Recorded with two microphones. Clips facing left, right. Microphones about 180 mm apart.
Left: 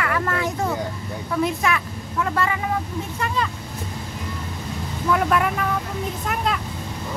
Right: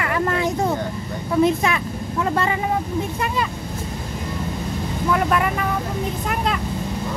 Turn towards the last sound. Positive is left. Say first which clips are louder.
# right 1 dB
turn(degrees=0)  # may be behind; listen again after turning